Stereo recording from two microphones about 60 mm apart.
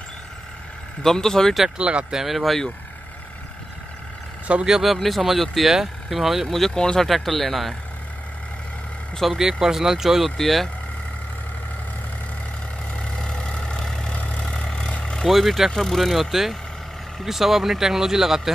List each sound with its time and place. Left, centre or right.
1.0 s speech: centre
1.8 s speech: centre
4.5 s speech: centre
4.9 s speech: centre
7.1 s speech: centre
9.1 s speech: centre
9.4 s speech: centre
10.3 s speech: centre
13.0 s vehicle: centre
15.2 s speech: centre